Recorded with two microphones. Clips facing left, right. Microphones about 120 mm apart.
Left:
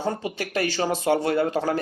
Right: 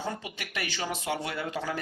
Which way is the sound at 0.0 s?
35° left (ahead or behind).